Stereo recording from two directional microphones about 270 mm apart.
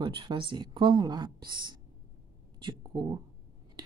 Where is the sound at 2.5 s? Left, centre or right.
Centre.